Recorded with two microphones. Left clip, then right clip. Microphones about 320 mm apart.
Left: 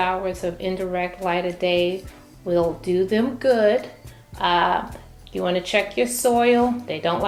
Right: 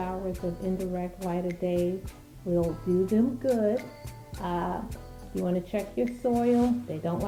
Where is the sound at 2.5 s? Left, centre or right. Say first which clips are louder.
Left 7 dB; centre.